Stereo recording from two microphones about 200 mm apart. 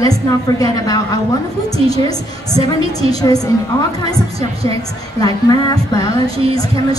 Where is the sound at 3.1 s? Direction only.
20° left (ahead or behind).